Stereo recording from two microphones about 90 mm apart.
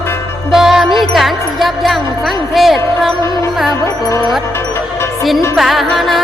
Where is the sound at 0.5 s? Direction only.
5° right (ahead or behind).